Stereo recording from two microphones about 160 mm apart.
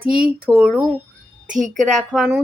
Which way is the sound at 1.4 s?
50° right (ahead or behind).